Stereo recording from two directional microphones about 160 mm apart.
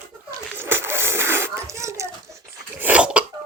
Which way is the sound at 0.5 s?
15° right (ahead or behind).